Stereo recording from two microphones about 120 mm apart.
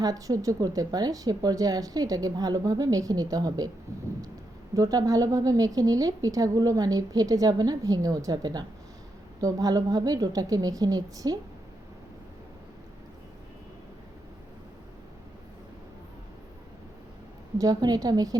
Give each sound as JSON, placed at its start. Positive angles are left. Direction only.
{"t": 0.0, "sound": "a woman's voice", "side_deg": -30}
{"t": 4.7, "sound": "a woman's voice", "side_deg": -30}
{"t": 17.6, "sound": "a woman's voice", "side_deg": -30}